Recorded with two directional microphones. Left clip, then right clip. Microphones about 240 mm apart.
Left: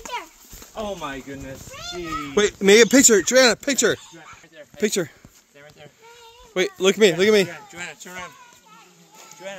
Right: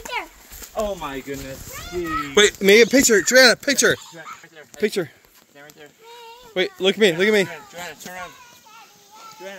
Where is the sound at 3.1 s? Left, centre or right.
Centre.